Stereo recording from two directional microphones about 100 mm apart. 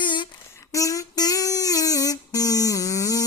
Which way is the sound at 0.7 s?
35° left (ahead or behind).